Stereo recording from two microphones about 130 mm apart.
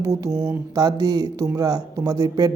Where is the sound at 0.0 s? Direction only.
25° right (ahead or behind).